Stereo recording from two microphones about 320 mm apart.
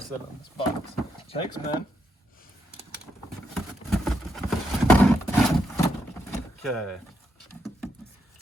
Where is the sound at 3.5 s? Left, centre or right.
Centre.